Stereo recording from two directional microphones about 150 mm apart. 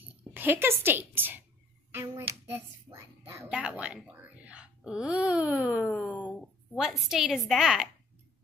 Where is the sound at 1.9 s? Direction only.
15° right (ahead or behind).